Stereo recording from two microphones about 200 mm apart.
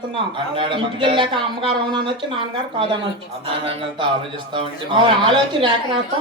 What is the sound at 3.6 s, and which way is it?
Speech, 30° right (ahead or behind).